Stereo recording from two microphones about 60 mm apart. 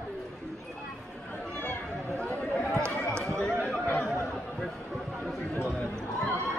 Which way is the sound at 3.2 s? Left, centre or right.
Centre.